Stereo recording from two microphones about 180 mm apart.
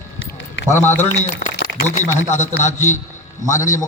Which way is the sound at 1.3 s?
70° left (ahead or behind).